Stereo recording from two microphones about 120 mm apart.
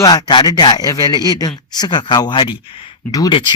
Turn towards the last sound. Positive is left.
turn(degrees=30)  # may be behind; listen again after turning